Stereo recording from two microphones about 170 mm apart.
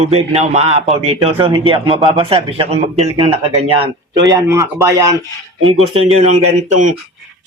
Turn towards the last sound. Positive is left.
turn(degrees=-40)  # may be behind; listen again after turning